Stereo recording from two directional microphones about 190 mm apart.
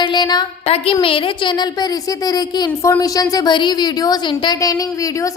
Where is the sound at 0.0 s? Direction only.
25° left (ahead or behind).